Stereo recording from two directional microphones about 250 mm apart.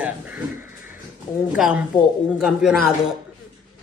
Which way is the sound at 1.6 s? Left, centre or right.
Centre.